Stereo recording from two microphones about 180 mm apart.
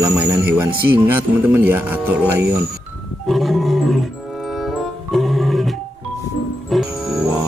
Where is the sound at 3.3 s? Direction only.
Centre (ahead or behind).